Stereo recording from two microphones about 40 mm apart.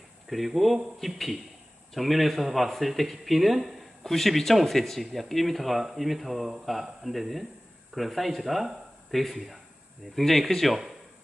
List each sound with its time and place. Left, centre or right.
0.3 s speech: centre